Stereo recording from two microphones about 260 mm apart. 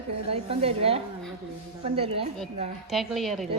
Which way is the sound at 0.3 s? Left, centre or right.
Right.